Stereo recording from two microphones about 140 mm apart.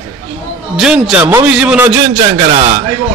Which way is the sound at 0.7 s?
5° right (ahead or behind).